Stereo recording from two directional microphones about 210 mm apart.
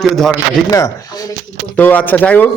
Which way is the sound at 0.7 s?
15° left (ahead or behind).